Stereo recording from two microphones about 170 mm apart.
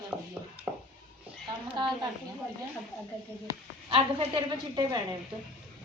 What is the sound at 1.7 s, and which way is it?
Speech, 25° right (ahead or behind).